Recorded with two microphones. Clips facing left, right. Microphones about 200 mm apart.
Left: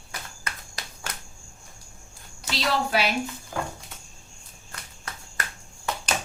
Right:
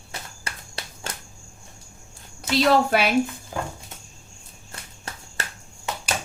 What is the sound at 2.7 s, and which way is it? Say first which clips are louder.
Speech: right 5 dB; 55° right (ahead or behind).